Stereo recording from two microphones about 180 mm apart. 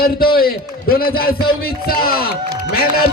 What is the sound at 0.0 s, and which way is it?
A man's voice, 55° left (ahead or behind).